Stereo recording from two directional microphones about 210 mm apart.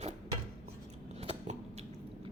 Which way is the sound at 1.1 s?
30° right (ahead or behind).